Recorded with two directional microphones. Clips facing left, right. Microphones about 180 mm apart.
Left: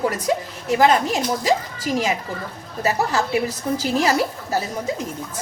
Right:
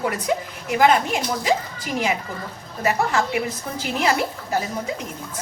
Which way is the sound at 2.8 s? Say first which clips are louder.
Even; 35° left (ahead or behind).